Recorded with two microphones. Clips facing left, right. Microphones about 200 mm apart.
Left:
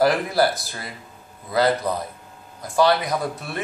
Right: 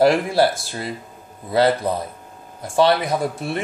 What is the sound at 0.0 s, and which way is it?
Speech, 25° right (ahead or behind).